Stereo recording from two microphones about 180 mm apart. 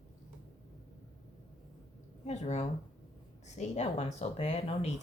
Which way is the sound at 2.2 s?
40° left (ahead or behind).